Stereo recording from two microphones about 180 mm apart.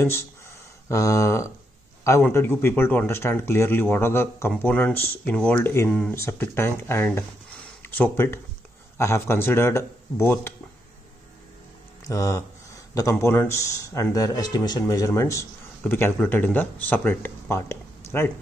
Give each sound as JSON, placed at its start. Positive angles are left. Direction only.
{"t": 0.0, "sound": "a man's voice", "side_deg": 15}
{"t": 12.1, "sound": "a man's voice", "side_deg": 15}